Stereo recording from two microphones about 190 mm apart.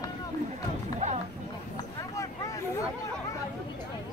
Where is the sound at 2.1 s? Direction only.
15° left (ahead or behind).